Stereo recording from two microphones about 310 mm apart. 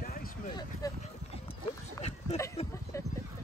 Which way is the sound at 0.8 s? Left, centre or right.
Centre.